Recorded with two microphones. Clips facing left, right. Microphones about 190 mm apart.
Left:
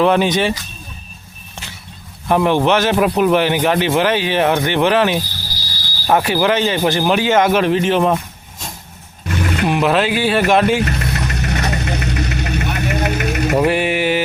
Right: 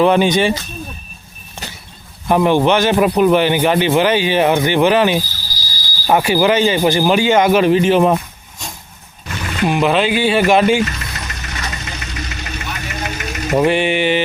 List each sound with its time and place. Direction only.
0.0 s a man's voice: centre (ahead or behind)
2.2 s a man's voice: centre (ahead or behind)
5.5 s a sound: 60° left (ahead or behind)
6.1 s a man's voice: 5° right (ahead or behind)
10.8 s vehicle: 60° left (ahead or behind)
13.6 s a man's voice: 5° left (ahead or behind)